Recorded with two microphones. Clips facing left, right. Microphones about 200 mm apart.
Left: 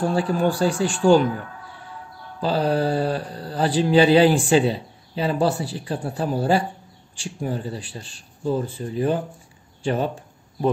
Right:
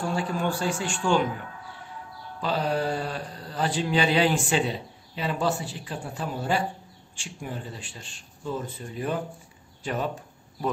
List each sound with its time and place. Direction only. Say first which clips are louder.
0.1 s speech: left 6 dB; 35° left (ahead or behind)
2.4 s speech: left 5 dB; 35° left (ahead or behind)